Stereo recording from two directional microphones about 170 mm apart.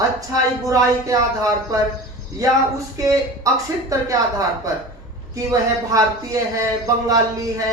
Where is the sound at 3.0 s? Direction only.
20° right (ahead or behind).